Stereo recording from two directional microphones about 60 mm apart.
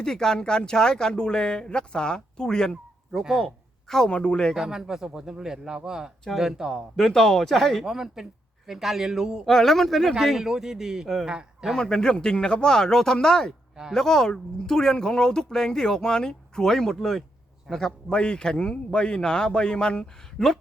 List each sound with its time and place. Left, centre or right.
0.0 s speech: centre
3.1 s speech: centre
3.4 s a sound: centre
4.1 s speech: centre
4.5 s a man's voice: centre
6.9 s speech: centre
7.9 s a man's voice: centre
9.5 s speech: centre
10.2 s a man's voice: centre
11.8 s speech: centre